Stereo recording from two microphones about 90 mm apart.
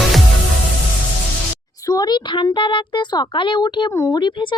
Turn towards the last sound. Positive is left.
turn(degrees=60)  # may be behind; listen again after turning